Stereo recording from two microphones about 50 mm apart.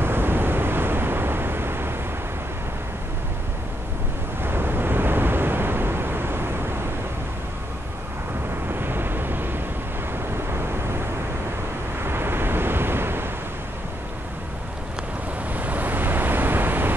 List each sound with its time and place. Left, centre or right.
0.0 s vehicle: right
4.4 s vehicle: right
8.6 s vehicle: right
12.0 s waves: right
15.5 s waves: right